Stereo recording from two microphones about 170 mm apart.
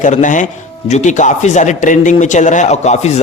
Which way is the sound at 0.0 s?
50° left (ahead or behind).